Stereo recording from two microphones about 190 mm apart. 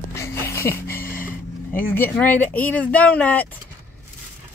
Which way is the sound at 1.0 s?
45° left (ahead or behind).